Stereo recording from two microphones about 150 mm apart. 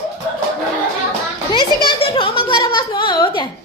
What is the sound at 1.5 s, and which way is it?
A child's voice, 30° left (ahead or behind).